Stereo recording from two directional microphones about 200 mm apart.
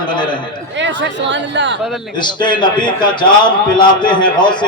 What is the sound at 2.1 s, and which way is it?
A man's voice, 25° left (ahead or behind).